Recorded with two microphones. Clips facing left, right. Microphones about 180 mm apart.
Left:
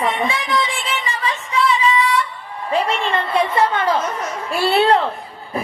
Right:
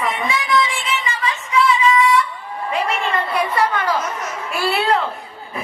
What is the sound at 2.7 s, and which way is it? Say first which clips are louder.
A woman's voice: left 2 dB; 30° left (ahead or behind).